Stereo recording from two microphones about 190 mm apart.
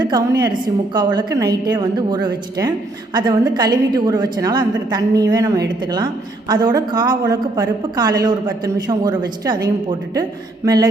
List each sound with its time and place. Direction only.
0.0 s a woman's voice: 20° right (ahead or behind)